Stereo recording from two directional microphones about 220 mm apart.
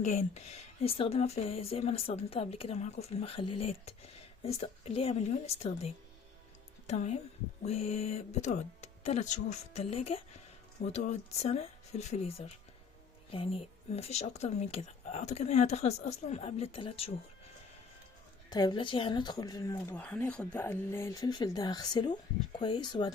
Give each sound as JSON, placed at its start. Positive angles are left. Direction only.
{"t": 0.0, "sound": "a woman's voice", "side_deg": 30}
{"t": 18.5, "sound": "speech", "side_deg": 20}